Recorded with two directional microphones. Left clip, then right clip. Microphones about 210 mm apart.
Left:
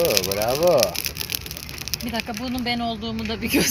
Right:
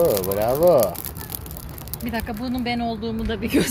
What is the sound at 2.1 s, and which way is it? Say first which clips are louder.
Speech: right 3 dB; 15° left (ahead or behind).